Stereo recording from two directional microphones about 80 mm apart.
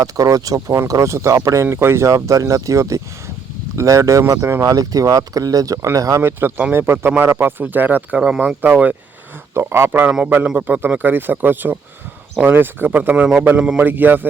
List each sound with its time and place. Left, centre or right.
0.0 s speech: right
6.2 s speech: right
8.2 s speech: centre
9.6 s speech: right